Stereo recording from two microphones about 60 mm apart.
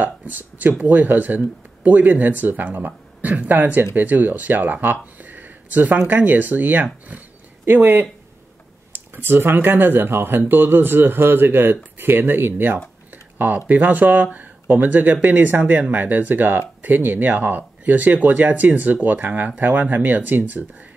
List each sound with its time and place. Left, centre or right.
0.2 s speech: right
13.1 s a sound: right
13.7 s speech: right